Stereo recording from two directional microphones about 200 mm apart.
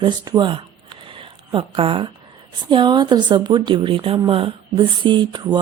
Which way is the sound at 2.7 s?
20° right (ahead or behind).